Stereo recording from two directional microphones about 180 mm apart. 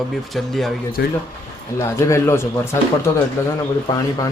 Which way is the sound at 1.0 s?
60° left (ahead or behind).